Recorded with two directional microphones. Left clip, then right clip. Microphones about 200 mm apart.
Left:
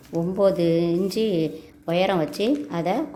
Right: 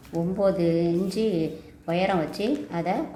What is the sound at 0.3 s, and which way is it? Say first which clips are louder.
Speech: left 3 dB; 45° left (ahead or behind).